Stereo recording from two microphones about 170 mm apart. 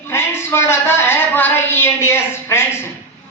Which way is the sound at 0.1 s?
15° left (ahead or behind).